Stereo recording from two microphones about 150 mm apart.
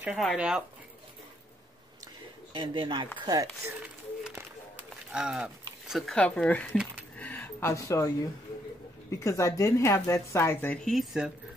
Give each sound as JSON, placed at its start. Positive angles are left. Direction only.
{"t": 0.0, "sound": "speech", "side_deg": 0}
{"t": 2.5, "sound": "speech", "side_deg": -35}
{"t": 5.1, "sound": "speech", "side_deg": -5}
{"t": 7.2, "sound": "a sound", "side_deg": 10}
{"t": 9.1, "sound": "speech", "side_deg": 20}
{"t": 10.8, "sound": "speech", "side_deg": 0}